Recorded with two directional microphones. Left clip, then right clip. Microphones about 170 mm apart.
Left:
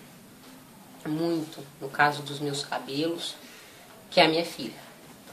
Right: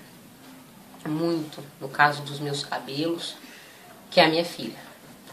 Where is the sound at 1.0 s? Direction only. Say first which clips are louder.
Right 2 dB; centre (ahead or behind).